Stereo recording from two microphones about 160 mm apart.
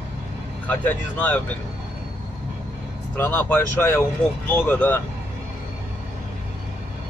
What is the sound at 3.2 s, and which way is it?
Speech, 10° left (ahead or behind).